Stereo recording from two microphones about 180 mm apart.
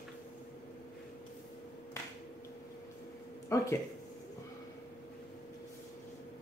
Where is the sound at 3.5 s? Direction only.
15° left (ahead or behind).